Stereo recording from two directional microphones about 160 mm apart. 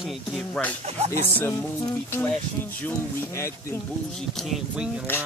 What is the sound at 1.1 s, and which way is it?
Speech, 15° left (ahead or behind).